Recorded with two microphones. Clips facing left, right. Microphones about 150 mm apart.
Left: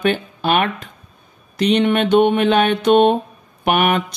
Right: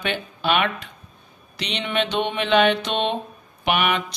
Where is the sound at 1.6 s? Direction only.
50° left (ahead or behind).